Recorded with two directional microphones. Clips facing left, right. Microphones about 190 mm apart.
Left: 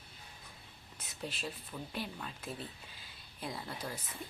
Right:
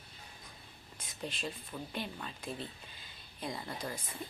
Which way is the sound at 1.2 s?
5° left (ahead or behind).